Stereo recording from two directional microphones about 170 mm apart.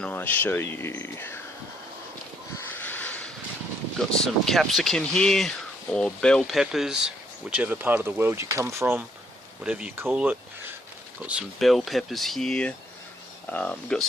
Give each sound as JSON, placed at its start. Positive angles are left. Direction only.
{"t": 0.0, "sound": "speech", "side_deg": 10}
{"t": 2.6, "sound": "a sound", "side_deg": 10}
{"t": 3.9, "sound": "speech", "side_deg": 0}